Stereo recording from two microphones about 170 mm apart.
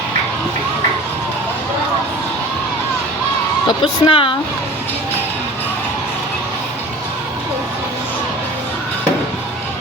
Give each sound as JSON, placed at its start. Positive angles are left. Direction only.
{"t": 3.7, "sound": "a woman's voice", "side_deg": 30}